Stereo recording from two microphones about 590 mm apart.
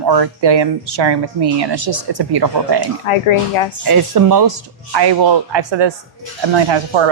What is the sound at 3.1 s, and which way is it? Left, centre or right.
Speech, left.